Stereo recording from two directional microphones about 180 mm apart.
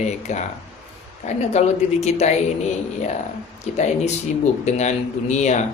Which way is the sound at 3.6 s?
40° left (ahead or behind).